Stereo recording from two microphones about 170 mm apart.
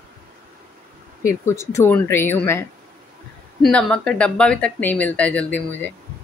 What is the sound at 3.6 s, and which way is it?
Speech, 5° left (ahead or behind).